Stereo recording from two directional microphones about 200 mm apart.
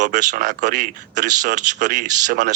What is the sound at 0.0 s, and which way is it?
Speech, 40° right (ahead or behind).